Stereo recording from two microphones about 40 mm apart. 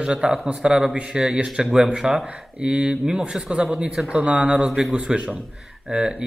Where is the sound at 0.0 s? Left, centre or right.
Centre.